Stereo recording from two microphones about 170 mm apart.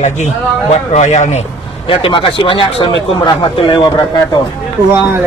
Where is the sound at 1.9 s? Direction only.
30° left (ahead or behind).